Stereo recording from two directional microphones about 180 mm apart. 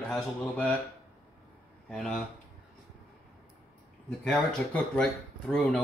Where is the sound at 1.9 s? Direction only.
Centre (ahead or behind).